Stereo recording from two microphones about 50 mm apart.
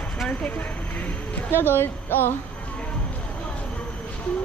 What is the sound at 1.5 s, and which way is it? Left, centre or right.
Speech, left.